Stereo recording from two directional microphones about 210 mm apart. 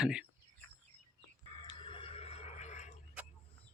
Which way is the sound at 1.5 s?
20° left (ahead or behind).